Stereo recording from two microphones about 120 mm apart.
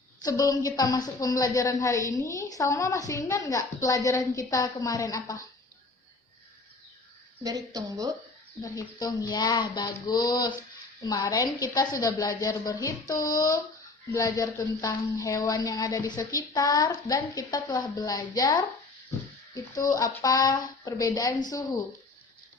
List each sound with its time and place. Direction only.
0.2 s a woman's voice: 30° left (ahead or behind)
7.4 s a woman's voice: 30° right (ahead or behind)
8.6 s a woman's voice: 30° left (ahead or behind)
19.7 s a woman's voice: 30° left (ahead or behind)